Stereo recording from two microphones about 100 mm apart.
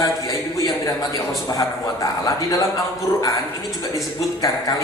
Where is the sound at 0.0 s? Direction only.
35° left (ahead or behind).